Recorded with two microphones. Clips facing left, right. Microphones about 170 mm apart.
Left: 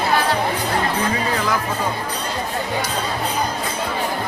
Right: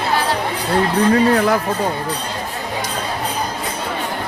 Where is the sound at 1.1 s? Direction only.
55° right (ahead or behind).